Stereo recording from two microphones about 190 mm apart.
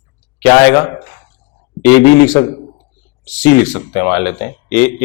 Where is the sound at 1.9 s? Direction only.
15° left (ahead or behind).